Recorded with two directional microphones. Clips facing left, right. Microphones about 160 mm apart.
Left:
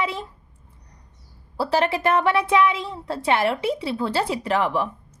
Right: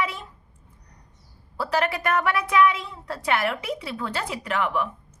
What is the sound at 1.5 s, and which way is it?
A woman's voice, 30° left (ahead or behind).